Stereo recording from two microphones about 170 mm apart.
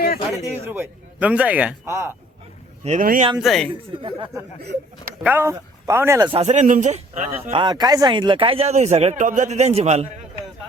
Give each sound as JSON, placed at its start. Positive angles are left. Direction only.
{"t": 0.4, "sound": "a man's voice", "side_deg": -10}
{"t": 2.8, "sound": "a man's voice", "side_deg": -50}
{"t": 3.3, "sound": "speech", "side_deg": 0}
{"t": 5.2, "sound": "a man's voice", "side_deg": -15}
{"t": 6.3, "sound": "a man's voice", "side_deg": -40}
{"t": 7.5, "sound": "speech", "side_deg": -25}